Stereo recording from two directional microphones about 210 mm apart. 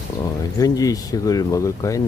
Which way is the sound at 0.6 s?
15° left (ahead or behind).